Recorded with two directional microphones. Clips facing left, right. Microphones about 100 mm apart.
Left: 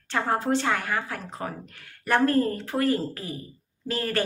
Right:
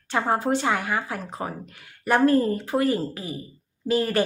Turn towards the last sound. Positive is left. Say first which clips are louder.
# right 5 dB
turn(degrees=-15)  # may be behind; listen again after turning